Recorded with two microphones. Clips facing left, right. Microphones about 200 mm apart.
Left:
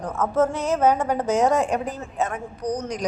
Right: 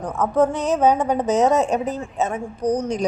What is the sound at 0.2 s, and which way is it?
A woman's voice, 15° right (ahead or behind).